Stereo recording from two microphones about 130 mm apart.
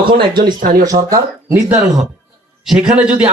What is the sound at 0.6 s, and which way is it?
Speech, 90° right.